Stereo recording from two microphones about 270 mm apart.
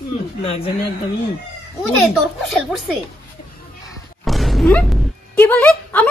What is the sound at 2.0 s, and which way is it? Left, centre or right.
A child's voice, centre.